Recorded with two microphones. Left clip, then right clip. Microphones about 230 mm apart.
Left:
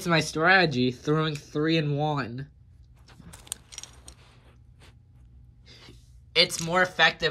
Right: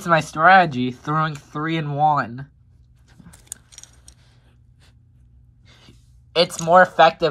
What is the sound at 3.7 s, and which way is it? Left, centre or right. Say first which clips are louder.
Scissors: left 2 dB; left.